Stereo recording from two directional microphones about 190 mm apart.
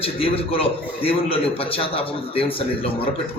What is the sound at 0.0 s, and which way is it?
A man's voice, 30° left (ahead or behind).